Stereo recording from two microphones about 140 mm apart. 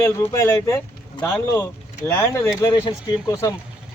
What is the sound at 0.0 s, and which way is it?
Speech, 20° left (ahead or behind).